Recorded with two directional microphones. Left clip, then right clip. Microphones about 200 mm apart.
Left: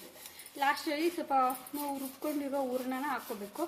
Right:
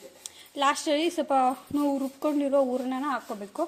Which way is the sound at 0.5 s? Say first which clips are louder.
Right 7 dB; 40° right (ahead or behind).